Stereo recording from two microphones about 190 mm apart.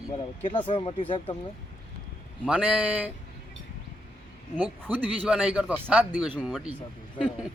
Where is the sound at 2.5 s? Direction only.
5° right (ahead or behind).